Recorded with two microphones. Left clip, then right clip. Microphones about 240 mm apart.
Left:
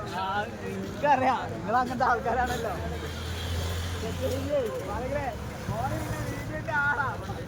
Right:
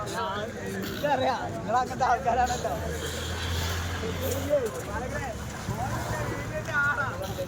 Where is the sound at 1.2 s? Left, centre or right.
Left.